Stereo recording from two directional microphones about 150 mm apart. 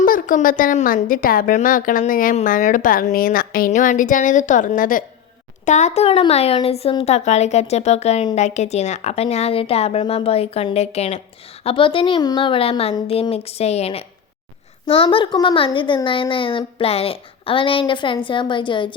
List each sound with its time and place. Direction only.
0.0 s a woman's voice: 65° left (ahead or behind)
3.7 s a woman's voice: 60° left (ahead or behind)
5.6 s speech: 55° left (ahead or behind); by 18.9 s 35° left (ahead or behind)